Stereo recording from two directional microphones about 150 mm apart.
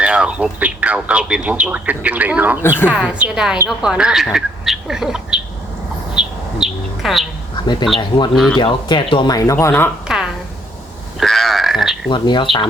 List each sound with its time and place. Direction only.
0.0 s speech: 5° right (ahead or behind)
6.1 s bird: 5° right (ahead or behind)
7.5 s a sound: 30° left (ahead or behind)
7.9 s speech: 35° left (ahead or behind); by 9.9 s 15° left (ahead or behind)
11.2 s grunt: centre (ahead or behind)
12.1 s speech: 30° left (ahead or behind)